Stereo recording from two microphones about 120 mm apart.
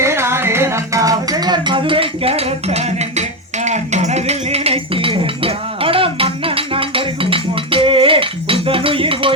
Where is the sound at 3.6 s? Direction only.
70° right (ahead or behind); by 6.3 s 50° right (ahead or behind).